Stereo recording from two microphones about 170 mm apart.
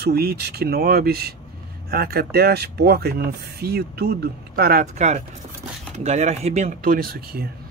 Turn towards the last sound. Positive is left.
turn(degrees=-65)  # may be behind; listen again after turning